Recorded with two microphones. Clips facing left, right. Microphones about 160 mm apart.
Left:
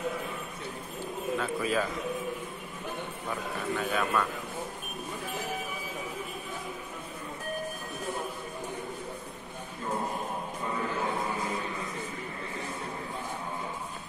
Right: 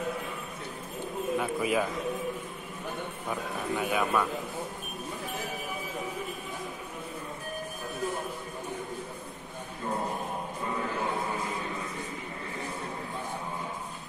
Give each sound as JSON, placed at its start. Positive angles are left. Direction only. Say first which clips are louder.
{"t": 1.4, "sound": "a man's voice", "louder": "right 1 dB", "side_deg": -15}
{"t": 3.7, "sound": "a man's voice", "louder": "right 2 dB", "side_deg": -15}